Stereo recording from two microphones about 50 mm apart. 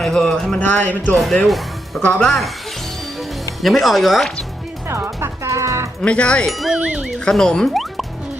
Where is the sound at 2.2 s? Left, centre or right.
Centre.